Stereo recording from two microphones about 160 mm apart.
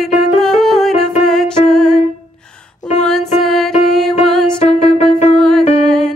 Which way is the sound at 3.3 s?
Centre (ahead or behind).